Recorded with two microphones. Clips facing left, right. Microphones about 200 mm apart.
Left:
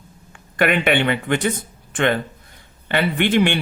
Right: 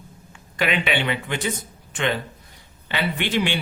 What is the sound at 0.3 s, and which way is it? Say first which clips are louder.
Speech: left 5 dB; 55° left (ahead or behind).